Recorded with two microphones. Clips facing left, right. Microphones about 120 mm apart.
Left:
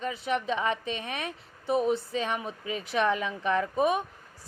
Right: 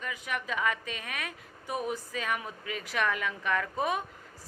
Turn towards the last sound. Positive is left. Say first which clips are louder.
# left 5 dB
turn(degrees=20)  # may be behind; listen again after turning